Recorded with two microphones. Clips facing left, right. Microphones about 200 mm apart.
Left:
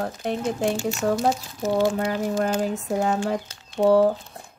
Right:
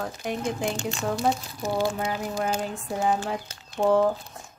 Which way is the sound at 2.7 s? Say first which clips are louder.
Left 2 dB; 75° left (ahead or behind).